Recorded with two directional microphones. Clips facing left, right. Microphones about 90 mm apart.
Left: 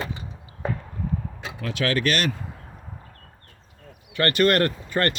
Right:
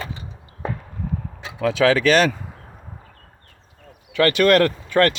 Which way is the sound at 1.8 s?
90° right.